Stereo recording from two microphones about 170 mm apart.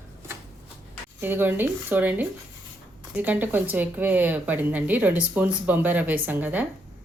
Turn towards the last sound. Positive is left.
turn(degrees=-10)  # may be behind; listen again after turning